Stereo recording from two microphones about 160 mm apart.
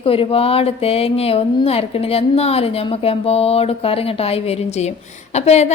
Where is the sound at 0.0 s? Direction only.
35° left (ahead or behind).